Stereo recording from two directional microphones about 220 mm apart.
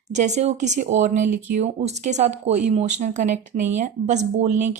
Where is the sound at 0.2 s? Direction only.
30° right (ahead or behind).